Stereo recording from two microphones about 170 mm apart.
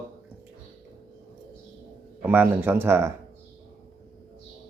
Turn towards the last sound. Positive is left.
turn(degrees=-15)  # may be behind; listen again after turning